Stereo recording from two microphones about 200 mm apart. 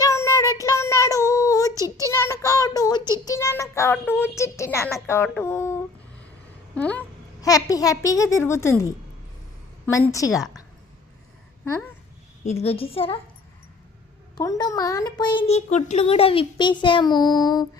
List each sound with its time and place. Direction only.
0.0 s child singing: 15° left (ahead or behind)
1.7 s a sound: 15° right (ahead or behind)
2.0 s child singing: 15° left (ahead or behind)
3.2 s a child's voice: 15° left (ahead or behind)
12.6 s a child's voice: 30° left (ahead or behind)
14.3 s a child's voice: 20° left (ahead or behind)